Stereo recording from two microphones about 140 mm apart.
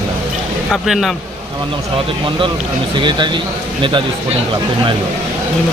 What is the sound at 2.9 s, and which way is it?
Speech, 35° right (ahead or behind).